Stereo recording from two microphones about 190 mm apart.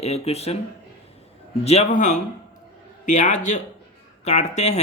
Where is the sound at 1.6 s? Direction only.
40° left (ahead or behind).